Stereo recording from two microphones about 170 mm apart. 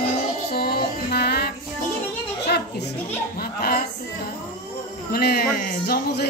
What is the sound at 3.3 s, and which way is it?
Speech, 65° left (ahead or behind).